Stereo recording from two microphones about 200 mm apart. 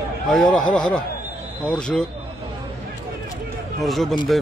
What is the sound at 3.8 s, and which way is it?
Speech, centre (ahead or behind).